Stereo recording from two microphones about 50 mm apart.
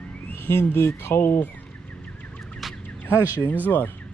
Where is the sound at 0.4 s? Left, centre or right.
Left.